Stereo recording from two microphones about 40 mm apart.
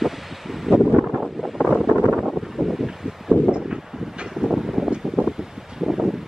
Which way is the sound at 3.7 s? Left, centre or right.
Centre.